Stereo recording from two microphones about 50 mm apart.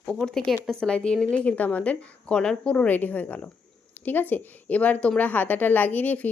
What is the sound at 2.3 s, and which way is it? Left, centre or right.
Speech, centre.